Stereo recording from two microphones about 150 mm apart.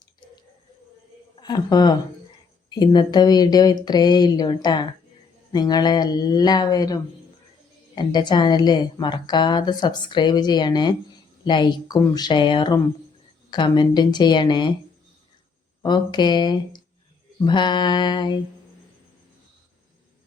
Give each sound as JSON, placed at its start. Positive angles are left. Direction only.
{"t": 1.4, "sound": "a woman's voice", "side_deg": 25}
{"t": 15.8, "sound": "a woman's voice", "side_deg": 30}